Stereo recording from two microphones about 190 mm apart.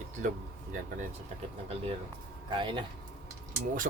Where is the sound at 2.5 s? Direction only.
25° right (ahead or behind).